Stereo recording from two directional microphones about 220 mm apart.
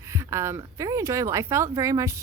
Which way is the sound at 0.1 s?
15° right (ahead or behind).